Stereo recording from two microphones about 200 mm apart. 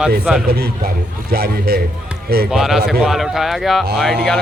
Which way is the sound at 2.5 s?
Centre (ahead or behind).